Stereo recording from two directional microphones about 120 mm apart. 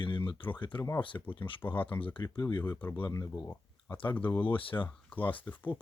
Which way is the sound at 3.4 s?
20° left (ahead or behind).